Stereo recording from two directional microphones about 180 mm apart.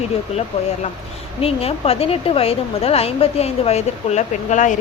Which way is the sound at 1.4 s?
35° left (ahead or behind).